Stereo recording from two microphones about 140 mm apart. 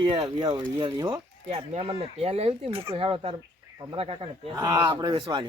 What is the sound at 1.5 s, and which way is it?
Speech, 45° right (ahead or behind).